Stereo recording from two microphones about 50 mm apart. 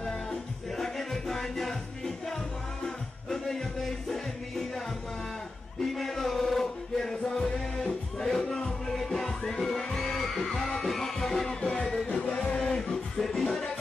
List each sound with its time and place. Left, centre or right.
0.0 s music: centre
5.9 s music: centre
11.6 s music: left; by 13.7 s centre